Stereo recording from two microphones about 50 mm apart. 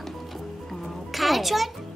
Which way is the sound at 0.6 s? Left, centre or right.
Centre.